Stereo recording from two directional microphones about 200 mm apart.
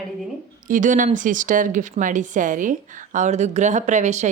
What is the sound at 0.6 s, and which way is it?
Speech, 40° right (ahead or behind).